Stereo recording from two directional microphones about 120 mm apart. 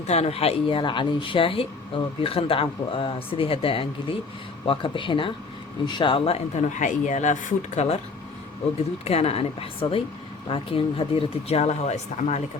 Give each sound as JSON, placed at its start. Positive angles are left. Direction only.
{"t": 0.1, "sound": "speech", "side_deg": 60}
{"t": 9.0, "sound": "speech", "side_deg": 60}